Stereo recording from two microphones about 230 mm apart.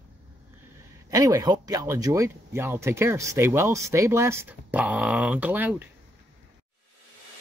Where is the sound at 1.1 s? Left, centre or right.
Centre.